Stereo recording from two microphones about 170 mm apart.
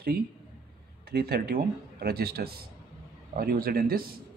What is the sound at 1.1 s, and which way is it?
Speech, 70° right (ahead or behind).